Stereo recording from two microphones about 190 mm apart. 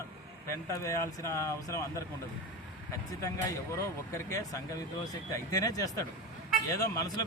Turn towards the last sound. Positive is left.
turn(degrees=20)  # may be behind; listen again after turning